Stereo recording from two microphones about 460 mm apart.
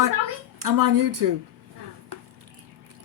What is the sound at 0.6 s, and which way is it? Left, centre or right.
Speech, right.